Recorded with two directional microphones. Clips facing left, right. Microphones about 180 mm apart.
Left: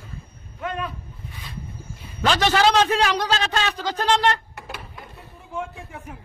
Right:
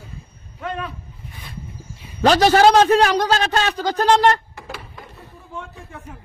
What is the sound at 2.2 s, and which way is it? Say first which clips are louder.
A man's voice: right 6 dB; 40° right (ahead or behind).